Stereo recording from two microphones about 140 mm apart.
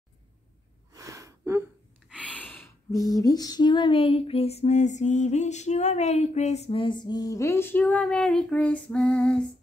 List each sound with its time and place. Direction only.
0.9 s gasp: 25° right (ahead or behind)
2.1 s gasp: 10° left (ahead or behind)
2.9 s female singing: 25° left (ahead or behind); by 9.4 s 10° left (ahead or behind)